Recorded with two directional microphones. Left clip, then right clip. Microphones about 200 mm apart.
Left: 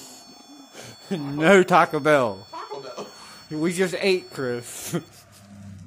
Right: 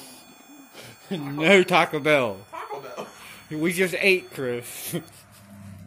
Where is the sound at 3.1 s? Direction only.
10° left (ahead or behind).